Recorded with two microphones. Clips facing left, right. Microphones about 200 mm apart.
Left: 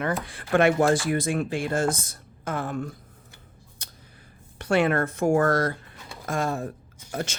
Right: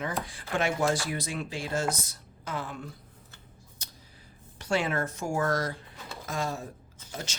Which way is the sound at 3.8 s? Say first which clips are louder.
Left 2 dB; 55° left (ahead or behind).